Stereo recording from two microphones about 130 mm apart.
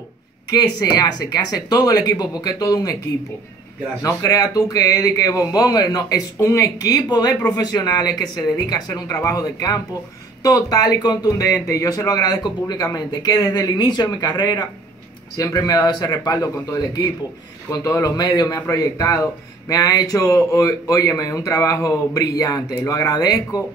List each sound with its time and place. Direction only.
0.5 s speech: 30° left (ahead or behind)
4.0 s speech: 25° left (ahead or behind)